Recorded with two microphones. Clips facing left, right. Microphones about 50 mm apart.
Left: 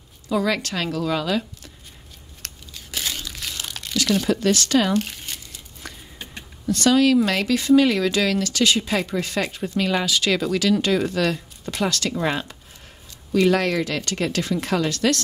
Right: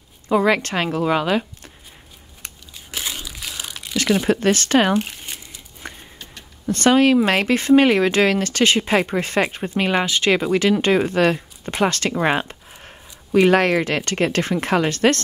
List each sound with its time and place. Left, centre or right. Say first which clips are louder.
0.3 s speech: right 5 dB; right
2.4 s crumpling: even; centre
3.9 s crumpling: right 2 dB; right
4.3 s speech: right 2 dB; right
4.9 s crumpling: right 1 dB; centre
6.6 s speech: right 2 dB; right